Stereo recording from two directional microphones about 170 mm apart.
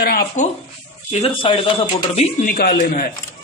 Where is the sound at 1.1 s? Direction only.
35° left (ahead or behind); by 3.1 s 55° left (ahead or behind).